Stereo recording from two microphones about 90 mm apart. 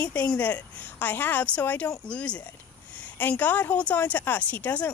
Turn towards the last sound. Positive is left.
turn(degrees=20)  # may be behind; listen again after turning